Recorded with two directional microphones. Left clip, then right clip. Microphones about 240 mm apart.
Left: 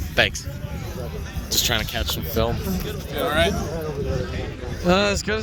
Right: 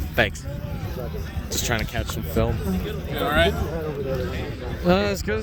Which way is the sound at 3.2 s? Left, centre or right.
Right.